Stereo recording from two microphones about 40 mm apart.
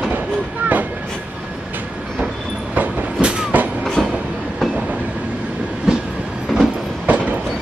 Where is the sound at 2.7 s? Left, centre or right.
Right.